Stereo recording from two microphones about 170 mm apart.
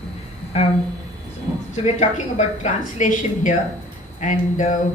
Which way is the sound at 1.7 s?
45° left (ahead or behind).